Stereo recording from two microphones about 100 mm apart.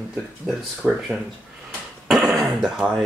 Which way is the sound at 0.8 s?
5° right (ahead or behind).